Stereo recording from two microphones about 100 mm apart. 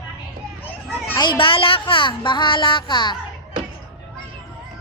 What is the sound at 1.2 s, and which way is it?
Speech, 55° left (ahead or behind).